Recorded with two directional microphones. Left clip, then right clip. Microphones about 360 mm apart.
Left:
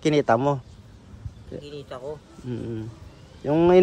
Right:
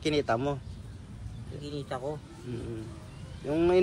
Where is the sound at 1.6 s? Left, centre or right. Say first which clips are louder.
Right 3 dB; centre.